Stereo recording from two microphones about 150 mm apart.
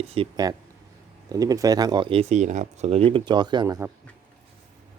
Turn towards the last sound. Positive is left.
turn(degrees=-20)  # may be behind; listen again after turning